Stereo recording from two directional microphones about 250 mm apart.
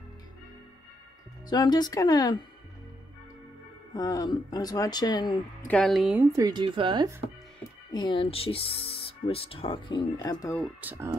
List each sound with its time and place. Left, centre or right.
1.5 s speech: centre
3.9 s speech: centre
5.7 s speech: centre
6.3 s speech: centre
7.9 s speech: centre
10.6 s speech: centre